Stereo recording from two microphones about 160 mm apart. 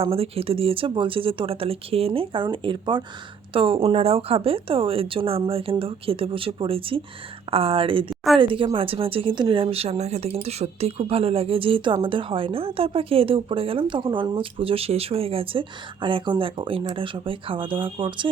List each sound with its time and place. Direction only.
0.0 s speech: 35° right (ahead or behind)